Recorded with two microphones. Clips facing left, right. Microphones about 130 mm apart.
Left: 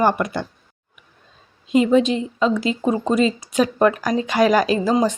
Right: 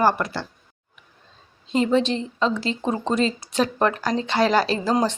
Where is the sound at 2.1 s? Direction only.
10° left (ahead or behind).